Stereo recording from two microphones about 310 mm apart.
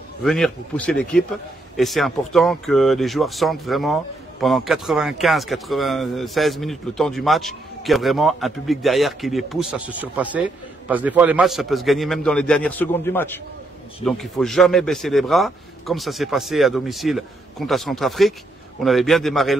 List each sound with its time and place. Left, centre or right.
0.2 s a man's voice: centre